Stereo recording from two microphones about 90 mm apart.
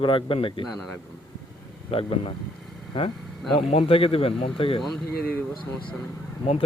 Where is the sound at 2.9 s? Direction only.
70° left (ahead or behind).